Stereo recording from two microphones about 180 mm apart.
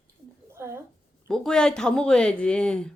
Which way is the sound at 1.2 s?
5° left (ahead or behind).